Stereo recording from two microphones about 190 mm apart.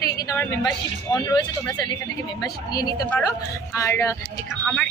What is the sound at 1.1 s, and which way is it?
A woman's voice, 20° left (ahead or behind).